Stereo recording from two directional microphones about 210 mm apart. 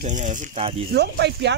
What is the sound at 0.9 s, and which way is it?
Speech, 55° right (ahead or behind).